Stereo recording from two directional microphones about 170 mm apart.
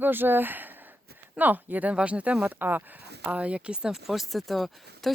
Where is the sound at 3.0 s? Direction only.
75° right (ahead or behind).